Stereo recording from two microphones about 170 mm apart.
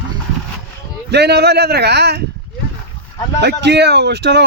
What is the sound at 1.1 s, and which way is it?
Speech, 75° right (ahead or behind).